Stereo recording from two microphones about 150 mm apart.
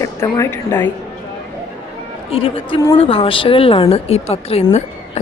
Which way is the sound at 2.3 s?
40° left (ahead or behind).